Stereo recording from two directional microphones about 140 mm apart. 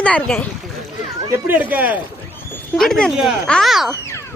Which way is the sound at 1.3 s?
15° right (ahead or behind).